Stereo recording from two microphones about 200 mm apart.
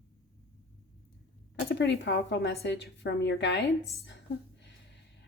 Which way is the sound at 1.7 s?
60° left (ahead or behind).